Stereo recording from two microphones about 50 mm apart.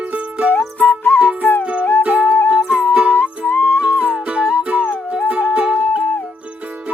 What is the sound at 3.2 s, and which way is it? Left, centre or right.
Music, left.